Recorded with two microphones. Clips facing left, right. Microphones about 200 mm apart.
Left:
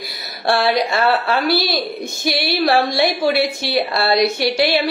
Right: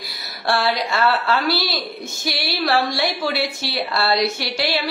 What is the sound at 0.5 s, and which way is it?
A woman's voice, 20° left (ahead or behind).